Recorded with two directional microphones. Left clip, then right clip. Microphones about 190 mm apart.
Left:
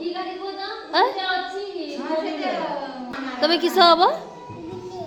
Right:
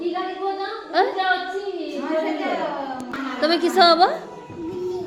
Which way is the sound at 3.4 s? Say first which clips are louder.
Even; 5° left (ahead or behind).